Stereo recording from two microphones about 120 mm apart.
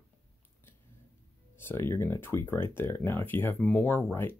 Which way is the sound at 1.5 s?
20° left (ahead or behind).